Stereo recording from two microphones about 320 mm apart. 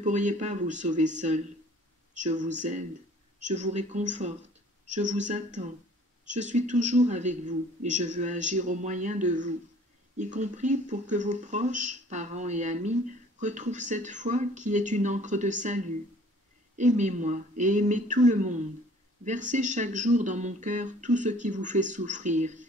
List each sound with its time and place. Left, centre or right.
0.0 s speech: right